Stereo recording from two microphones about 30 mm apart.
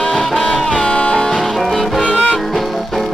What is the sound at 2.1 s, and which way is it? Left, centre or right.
Music, left.